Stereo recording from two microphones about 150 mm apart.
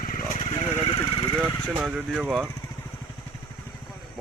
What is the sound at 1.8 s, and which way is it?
Speech, 5° right (ahead or behind).